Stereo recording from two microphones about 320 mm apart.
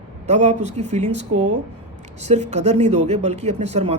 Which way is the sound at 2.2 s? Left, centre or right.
Right.